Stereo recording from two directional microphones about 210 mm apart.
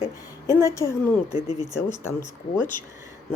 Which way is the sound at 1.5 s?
30° left (ahead or behind).